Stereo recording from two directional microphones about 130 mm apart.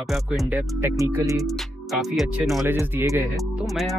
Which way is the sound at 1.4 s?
Centre (ahead or behind).